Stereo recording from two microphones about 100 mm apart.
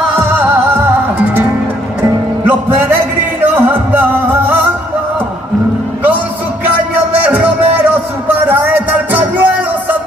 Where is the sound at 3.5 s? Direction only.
15° right (ahead or behind).